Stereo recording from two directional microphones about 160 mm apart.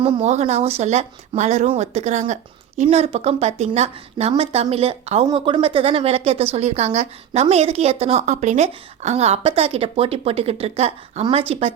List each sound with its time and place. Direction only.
0.0 s a woman's voice: 40° right (ahead or behind)